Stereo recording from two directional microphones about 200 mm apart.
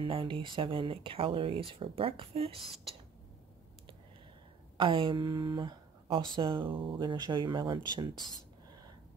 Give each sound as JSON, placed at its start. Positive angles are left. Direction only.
{"t": 0.0, "sound": "speech", "side_deg": -25}
{"t": 4.7, "sound": "a woman's voice", "side_deg": -25}